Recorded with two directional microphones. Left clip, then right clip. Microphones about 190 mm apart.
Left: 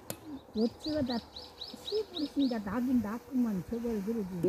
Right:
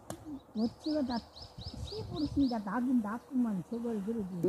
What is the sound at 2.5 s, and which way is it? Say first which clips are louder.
Speech: even; 25° left (ahead or behind).